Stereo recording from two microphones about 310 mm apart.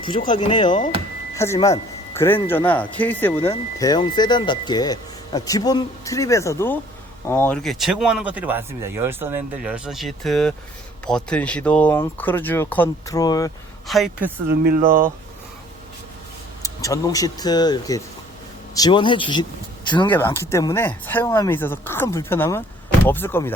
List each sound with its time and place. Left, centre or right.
0.3 s speech: centre
13.8 s speech: centre
14.4 s speech: right
16.6 s speech: centre